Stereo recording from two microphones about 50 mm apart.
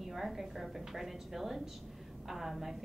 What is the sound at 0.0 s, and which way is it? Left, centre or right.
A woman's voice, centre.